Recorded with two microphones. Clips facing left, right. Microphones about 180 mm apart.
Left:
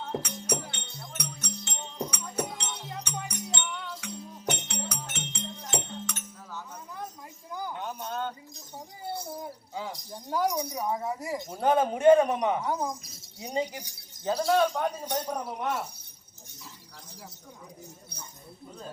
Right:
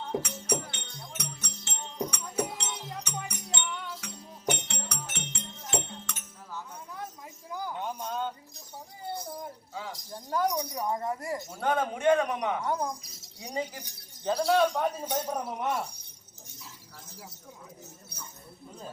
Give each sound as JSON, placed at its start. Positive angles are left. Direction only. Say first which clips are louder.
{"t": 0.1, "sound": "music", "louder": "right 1 dB", "side_deg": -5}
{"t": 7.5, "sound": "a sound", "louder": "right 1 dB", "side_deg": 0}
{"t": 9.9, "sound": "speech", "louder": "right 2 dB", "side_deg": 5}
{"t": 11.5, "sound": "a man's voice", "louder": "left 5 dB", "side_deg": 35}
{"t": 12.6, "sound": "speech", "louder": "even", "side_deg": 5}
{"t": 13.4, "sound": "speech", "louder": "left 3 dB", "side_deg": 25}
{"t": 13.7, "sound": "speech", "louder": "left 3 dB", "side_deg": 10}
{"t": 14.3, "sound": "speech", "louder": "even", "side_deg": 0}